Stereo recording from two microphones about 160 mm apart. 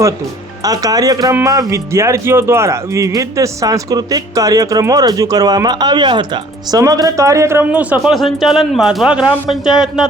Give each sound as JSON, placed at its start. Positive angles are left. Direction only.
{"t": 0.6, "sound": "a man's voice", "side_deg": -20}